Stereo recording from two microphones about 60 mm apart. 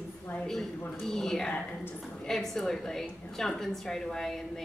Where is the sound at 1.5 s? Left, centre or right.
Left.